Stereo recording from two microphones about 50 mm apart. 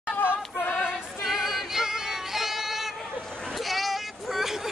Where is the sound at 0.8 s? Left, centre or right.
Centre.